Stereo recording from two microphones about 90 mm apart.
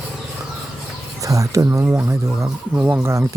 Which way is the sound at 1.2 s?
35° right (ahead or behind).